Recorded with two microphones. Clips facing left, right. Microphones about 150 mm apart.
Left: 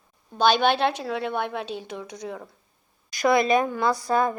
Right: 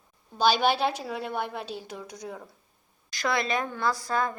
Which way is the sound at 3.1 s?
20° left (ahead or behind).